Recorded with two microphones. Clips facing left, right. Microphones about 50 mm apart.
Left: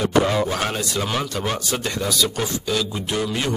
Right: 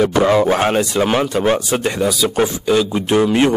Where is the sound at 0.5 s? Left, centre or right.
Right.